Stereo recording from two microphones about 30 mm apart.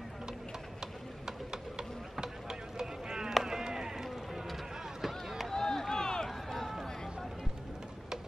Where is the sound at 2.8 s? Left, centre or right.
Centre.